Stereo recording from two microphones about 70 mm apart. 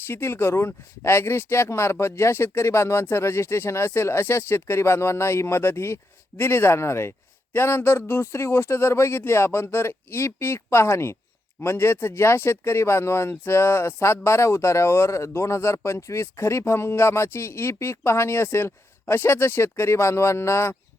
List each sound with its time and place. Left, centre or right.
0.1 s speech: left